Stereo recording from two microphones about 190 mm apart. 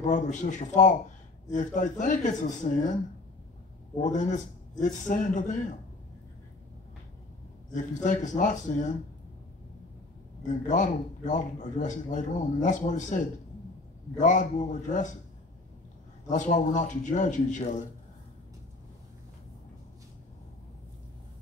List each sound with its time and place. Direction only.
0.0 s a man's voice: 40° left (ahead or behind)
4.0 s a man's voice: 40° left (ahead or behind)
7.7 s a man's voice: 40° left (ahead or behind)
10.4 s a man's voice: 40° left (ahead or behind)
16.3 s a man's voice: 40° left (ahead or behind)